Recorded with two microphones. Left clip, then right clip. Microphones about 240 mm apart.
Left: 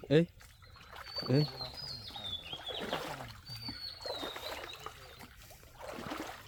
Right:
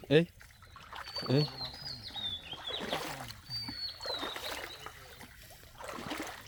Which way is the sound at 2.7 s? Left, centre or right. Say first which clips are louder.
Right 2 dB; right.